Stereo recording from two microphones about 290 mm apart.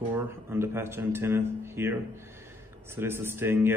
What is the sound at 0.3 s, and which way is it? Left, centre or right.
Speech, centre.